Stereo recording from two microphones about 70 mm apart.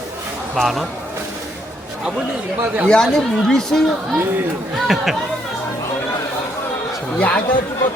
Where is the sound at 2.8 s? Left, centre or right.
Centre.